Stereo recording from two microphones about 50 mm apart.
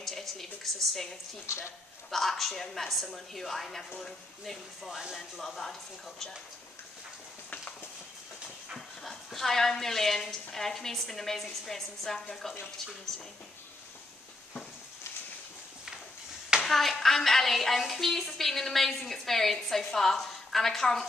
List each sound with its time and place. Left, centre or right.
0.0 s a woman's voice: centre
1.4 s speech: left
2.0 s speech: centre
8.7 s speech: centre
16.6 s speech: centre